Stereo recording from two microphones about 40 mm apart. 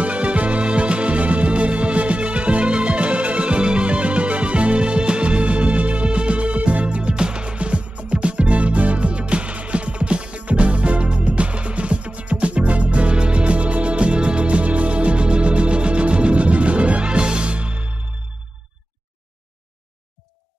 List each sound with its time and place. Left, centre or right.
0.0 s music: right